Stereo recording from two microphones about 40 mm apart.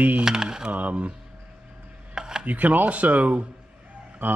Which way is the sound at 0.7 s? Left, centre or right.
Right.